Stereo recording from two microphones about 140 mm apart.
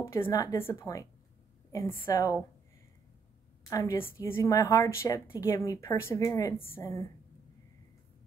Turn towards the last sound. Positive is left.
turn(degrees=25)  # may be behind; listen again after turning